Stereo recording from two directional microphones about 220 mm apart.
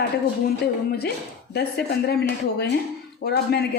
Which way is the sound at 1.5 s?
50° left (ahead or behind).